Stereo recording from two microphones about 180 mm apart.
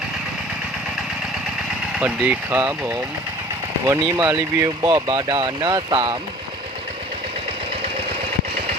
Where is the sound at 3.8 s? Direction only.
20° right (ahead or behind).